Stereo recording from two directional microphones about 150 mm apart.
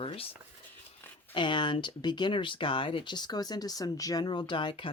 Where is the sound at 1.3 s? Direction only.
30° left (ahead or behind).